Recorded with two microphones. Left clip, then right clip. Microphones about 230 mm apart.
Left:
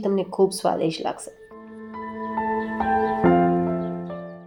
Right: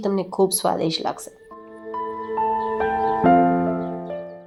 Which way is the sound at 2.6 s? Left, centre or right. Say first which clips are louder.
Right 1 dB; centre.